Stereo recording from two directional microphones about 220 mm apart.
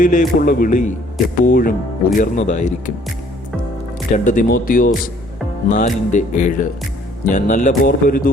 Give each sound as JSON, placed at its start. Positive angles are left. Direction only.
{"t": 0.0, "sound": "a man's voice", "side_deg": 35}
{"t": 4.1, "sound": "a man's voice", "side_deg": 35}